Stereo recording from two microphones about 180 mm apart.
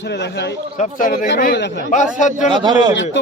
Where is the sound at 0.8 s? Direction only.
45° left (ahead or behind).